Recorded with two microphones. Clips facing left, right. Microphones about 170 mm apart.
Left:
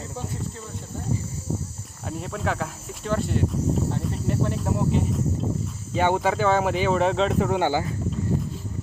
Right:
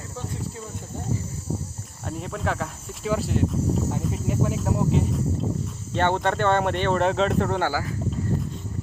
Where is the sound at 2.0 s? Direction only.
Centre (ahead or behind).